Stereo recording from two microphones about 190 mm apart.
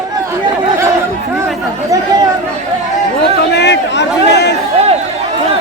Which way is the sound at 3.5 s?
65° left (ahead or behind).